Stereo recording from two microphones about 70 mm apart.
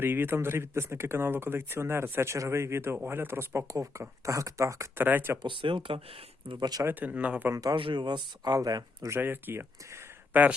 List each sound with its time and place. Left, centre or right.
0.0 s speech: right
3.7 s speech: right
4.9 s speech: right
6.6 s speech: right
6.8 s speech: right
7.5 s speech: right
8.5 s speech: right
9.2 s speech: right